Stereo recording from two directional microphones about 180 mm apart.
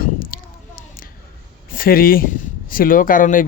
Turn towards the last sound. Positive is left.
turn(degrees=50)  # may be behind; listen again after turning